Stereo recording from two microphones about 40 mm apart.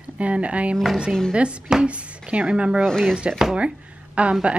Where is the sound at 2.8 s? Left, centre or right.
Centre.